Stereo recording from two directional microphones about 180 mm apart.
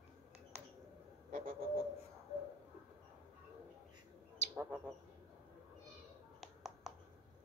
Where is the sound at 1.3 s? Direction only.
50° right (ahead or behind).